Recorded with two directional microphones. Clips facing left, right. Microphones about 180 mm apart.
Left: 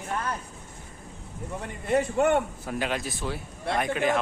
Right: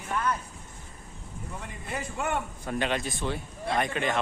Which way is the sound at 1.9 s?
60° left (ahead or behind).